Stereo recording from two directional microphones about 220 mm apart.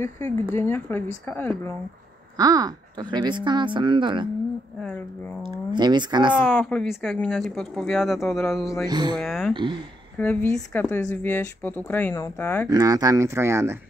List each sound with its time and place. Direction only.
0.0 s speech: 10° left (ahead or behind)
2.3 s speech: 15° right (ahead or behind)
5.5 s speech: 20° right (ahead or behind)
6.3 s speech: 5° left (ahead or behind)
8.8 s speech: 20° right (ahead or behind)
9.2 s speech: centre (ahead or behind)
12.6 s speech: 15° right (ahead or behind)